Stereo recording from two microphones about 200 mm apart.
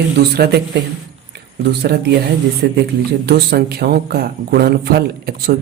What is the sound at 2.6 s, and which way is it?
Speech, 55° right (ahead or behind).